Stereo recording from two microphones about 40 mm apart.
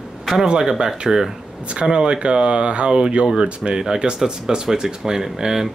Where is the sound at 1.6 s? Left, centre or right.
Right.